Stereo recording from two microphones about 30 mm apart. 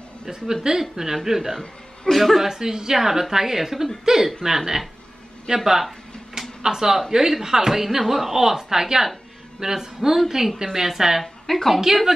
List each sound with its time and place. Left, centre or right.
0.7 s a woman's voice: centre
2.0 s a woman's voice: centre
2.4 s a woman's voice: centre
5.6 s a sound: centre
6.6 s a woman's voice: centre
11.4 s a woman's voice: centre